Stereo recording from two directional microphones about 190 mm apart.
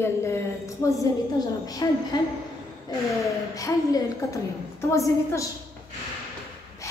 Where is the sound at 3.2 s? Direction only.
15° left (ahead or behind).